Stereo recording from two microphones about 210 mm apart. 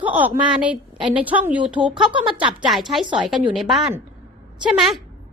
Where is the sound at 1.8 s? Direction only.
25° right (ahead or behind).